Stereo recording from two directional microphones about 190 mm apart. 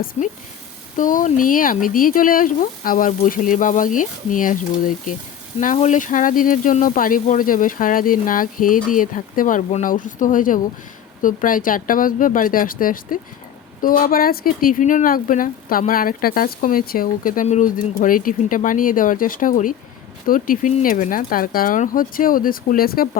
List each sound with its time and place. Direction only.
0.0 s speech: 50° left (ahead or behind)